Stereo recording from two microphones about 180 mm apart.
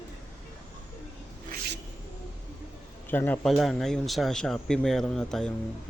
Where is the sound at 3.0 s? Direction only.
10° left (ahead or behind).